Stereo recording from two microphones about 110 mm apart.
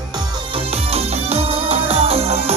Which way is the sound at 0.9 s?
70° right (ahead or behind).